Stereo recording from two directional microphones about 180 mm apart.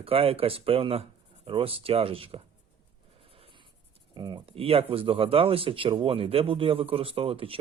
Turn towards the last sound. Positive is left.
turn(degrees=-30)  # may be behind; listen again after turning